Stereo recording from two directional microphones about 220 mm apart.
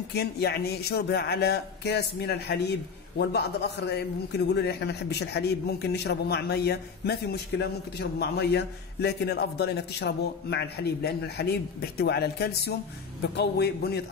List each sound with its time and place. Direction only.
0.1 s a man's voice: 50° left (ahead or behind)